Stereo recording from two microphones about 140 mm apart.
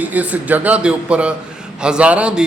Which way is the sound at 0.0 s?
10° right (ahead or behind).